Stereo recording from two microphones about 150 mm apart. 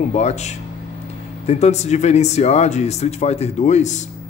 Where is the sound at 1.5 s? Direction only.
45° left (ahead or behind).